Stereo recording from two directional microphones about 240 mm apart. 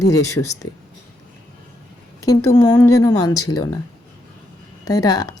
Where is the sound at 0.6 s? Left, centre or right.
Left.